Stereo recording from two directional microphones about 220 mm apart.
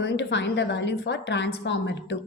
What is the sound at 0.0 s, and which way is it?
A woman's voice, 55° left (ahead or behind).